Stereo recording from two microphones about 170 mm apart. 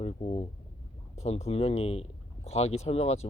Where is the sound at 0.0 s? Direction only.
35° left (ahead or behind).